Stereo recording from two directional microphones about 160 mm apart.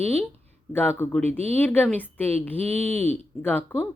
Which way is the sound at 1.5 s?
10° left (ahead or behind).